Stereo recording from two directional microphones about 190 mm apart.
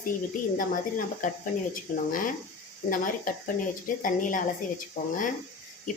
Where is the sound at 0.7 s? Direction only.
45° left (ahead or behind).